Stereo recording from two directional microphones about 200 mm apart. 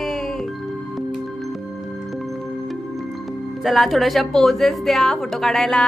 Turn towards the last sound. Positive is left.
turn(degrees=0)  # may be behind; listen again after turning